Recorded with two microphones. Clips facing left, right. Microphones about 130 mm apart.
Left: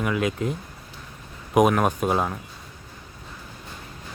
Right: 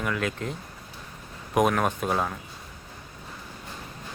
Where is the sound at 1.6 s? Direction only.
5° left (ahead or behind).